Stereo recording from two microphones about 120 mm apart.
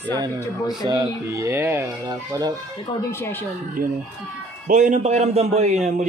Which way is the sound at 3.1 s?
20° left (ahead or behind).